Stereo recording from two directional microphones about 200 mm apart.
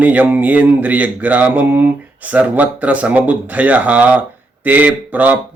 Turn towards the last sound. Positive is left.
turn(degrees=-10)  # may be behind; listen again after turning